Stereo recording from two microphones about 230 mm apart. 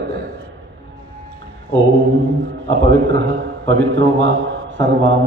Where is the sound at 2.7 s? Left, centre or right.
Right.